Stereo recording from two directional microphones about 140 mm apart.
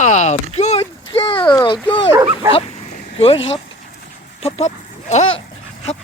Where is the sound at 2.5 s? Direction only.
40° left (ahead or behind).